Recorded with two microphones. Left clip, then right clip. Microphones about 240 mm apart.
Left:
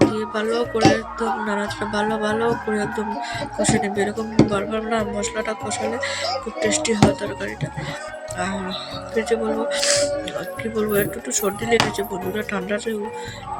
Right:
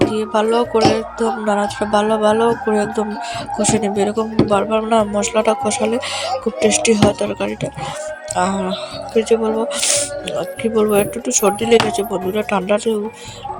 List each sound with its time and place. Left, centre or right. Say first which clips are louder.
0.1 s speech: right 7 dB; centre